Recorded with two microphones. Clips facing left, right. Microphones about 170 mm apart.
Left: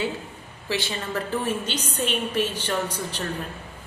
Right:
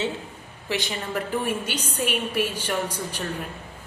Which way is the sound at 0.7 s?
15° right (ahead or behind).